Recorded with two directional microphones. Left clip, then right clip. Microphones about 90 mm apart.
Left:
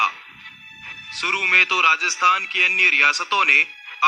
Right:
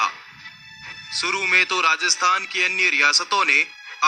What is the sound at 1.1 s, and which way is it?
A man's voice, 25° right (ahead or behind).